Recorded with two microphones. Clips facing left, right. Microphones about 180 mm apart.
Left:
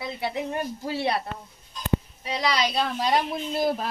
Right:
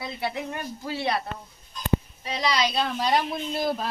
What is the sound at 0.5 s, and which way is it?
Speech, 30° left (ahead or behind).